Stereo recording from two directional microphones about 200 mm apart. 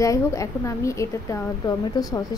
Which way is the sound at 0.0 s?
15° left (ahead or behind).